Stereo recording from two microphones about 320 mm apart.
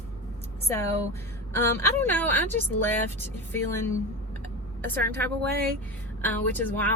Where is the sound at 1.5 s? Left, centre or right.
Centre.